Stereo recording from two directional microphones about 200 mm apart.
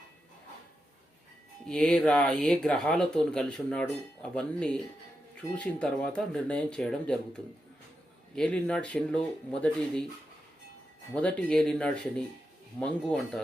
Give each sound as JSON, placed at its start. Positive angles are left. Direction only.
{"t": 1.6, "sound": "speech", "side_deg": 5}
{"t": 11.1, "sound": "speech", "side_deg": 5}